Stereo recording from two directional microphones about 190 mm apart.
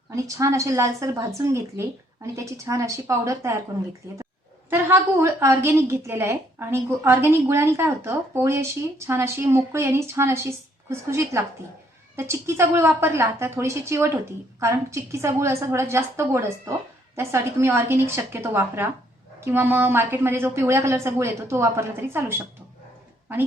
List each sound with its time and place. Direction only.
0.3 s a woman's voice: 15° right (ahead or behind)
4.7 s a woman's voice: 10° right (ahead or behind)